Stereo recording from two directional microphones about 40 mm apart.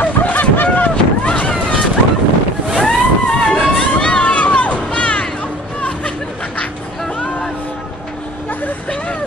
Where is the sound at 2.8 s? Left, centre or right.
Centre.